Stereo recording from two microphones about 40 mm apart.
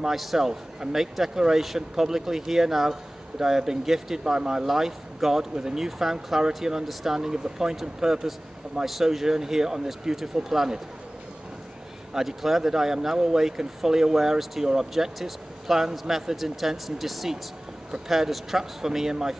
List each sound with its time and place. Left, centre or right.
0.0 s a man's voice: centre
0.5 s speech: centre
6.9 s a man's voice: centre
7.2 s speech: centre
8.8 s speech: centre
12.1 s speech: centre